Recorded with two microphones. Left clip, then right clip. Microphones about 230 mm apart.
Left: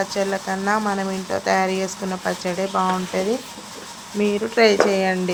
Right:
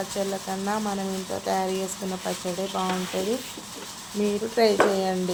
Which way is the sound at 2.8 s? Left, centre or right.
Left.